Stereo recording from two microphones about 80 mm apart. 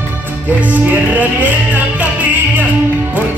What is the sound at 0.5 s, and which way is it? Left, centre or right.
Music, centre.